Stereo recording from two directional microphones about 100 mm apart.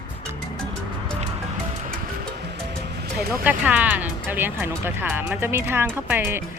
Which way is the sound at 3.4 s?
15° right (ahead or behind).